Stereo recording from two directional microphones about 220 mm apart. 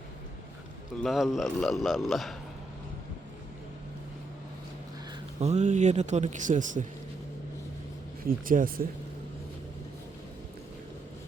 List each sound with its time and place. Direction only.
1.0 s speech: centre (ahead or behind)
5.4 s speech: 30° right (ahead or behind)
8.2 s speech: 40° right (ahead or behind)